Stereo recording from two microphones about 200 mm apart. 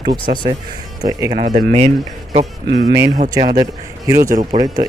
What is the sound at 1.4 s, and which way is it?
Speech, 40° right (ahead or behind).